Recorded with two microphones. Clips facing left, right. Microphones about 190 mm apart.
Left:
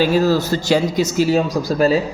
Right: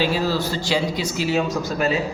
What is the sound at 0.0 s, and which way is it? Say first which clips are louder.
Speech: left 6 dB; 45° left (ahead or behind).